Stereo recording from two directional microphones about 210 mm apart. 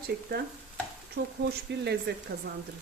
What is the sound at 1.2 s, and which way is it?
Speech, 60° right (ahead or behind).